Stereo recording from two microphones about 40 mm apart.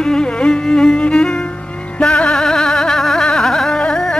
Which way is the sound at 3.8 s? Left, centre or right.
Centre.